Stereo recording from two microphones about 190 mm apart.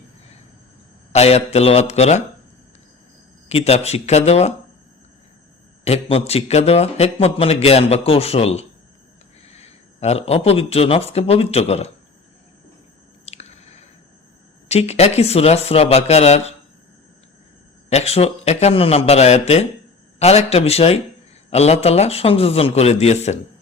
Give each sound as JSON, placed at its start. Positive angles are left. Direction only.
{"t": 1.1, "sound": "a man's voice", "side_deg": 35}
{"t": 3.5, "sound": "a man's voice", "side_deg": 35}
{"t": 5.8, "sound": "a man's voice", "side_deg": 30}
{"t": 13.2, "sound": "squish", "side_deg": 35}
{"t": 14.7, "sound": "a man's voice", "side_deg": 35}
{"t": 17.8, "sound": "a man's voice", "side_deg": 35}